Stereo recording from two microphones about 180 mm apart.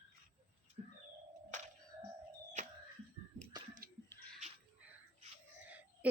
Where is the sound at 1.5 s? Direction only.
45° right (ahead or behind).